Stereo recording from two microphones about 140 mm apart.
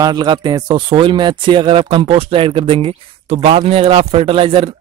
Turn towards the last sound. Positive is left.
turn(degrees=-40)  # may be behind; listen again after turning